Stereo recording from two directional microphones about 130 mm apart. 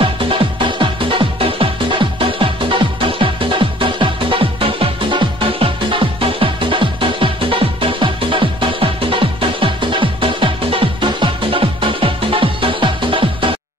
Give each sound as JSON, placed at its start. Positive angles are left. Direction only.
{"t": 0.0, "sound": "music", "side_deg": -45}